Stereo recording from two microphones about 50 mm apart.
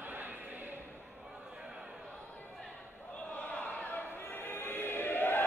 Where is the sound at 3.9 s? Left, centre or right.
Left.